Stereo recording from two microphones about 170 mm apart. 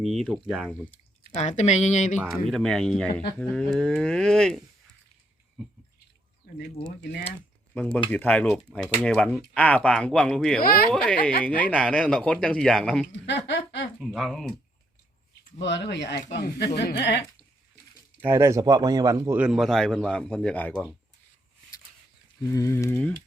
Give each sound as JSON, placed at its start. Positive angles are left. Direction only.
{"t": 0.0, "sound": "speech", "side_deg": 0}
{"t": 1.3, "sound": "speech", "side_deg": 40}
{"t": 2.5, "sound": "speech", "side_deg": 5}
{"t": 6.5, "sound": "a sound", "side_deg": 70}
{"t": 7.7, "sound": "speech", "side_deg": 5}
{"t": 11.2, "sound": "speech", "side_deg": 60}
{"t": 11.4, "sound": "speech", "side_deg": 10}
{"t": 13.2, "sound": "speech", "side_deg": 90}
{"t": 14.0, "sound": "speech", "side_deg": 0}
{"t": 15.5, "sound": "speech", "side_deg": 90}
{"t": 18.2, "sound": "speech", "side_deg": -15}
{"t": 19.4, "sound": "speech", "side_deg": -5}
{"t": 22.5, "sound": "speech", "side_deg": 15}